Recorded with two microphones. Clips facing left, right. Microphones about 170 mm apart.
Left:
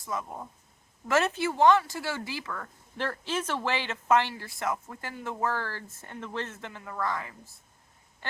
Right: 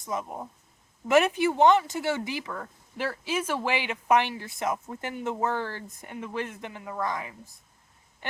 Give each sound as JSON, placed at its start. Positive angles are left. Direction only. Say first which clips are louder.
{"t": 0.0, "sound": "speech", "louder": "right 2 dB", "side_deg": -20}